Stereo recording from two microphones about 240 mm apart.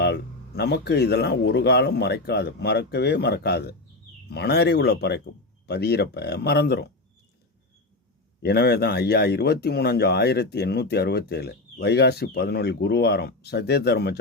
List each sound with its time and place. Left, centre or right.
0.0 s speech: left
8.4 s speech: left